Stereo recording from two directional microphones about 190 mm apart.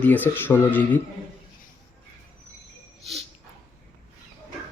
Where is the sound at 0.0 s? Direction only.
10° left (ahead or behind).